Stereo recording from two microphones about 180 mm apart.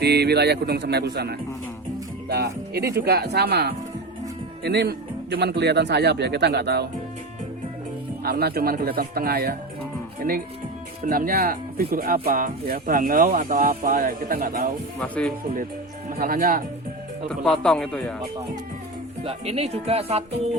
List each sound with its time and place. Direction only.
0.0 s speech: 65° right (ahead or behind)
8.2 s speech: 60° right (ahead or behind)
11.0 s speech: 50° right (ahead or behind)
15.0 s speech: 5° left (ahead or behind)
16.0 s speech: 55° right (ahead or behind)
17.2 s speech: 5° left (ahead or behind)
19.2 s speech: 35° right (ahead or behind)